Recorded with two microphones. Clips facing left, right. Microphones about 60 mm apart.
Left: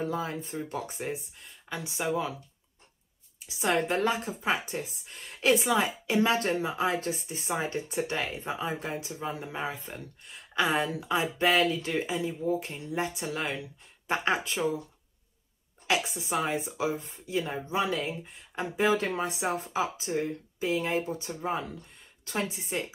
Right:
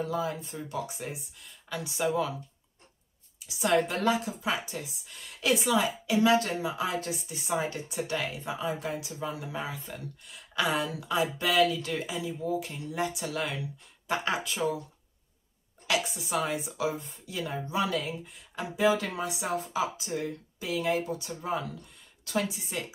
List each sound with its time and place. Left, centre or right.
0.0 s speech: left
3.4 s a woman's voice: left
15.9 s speech: left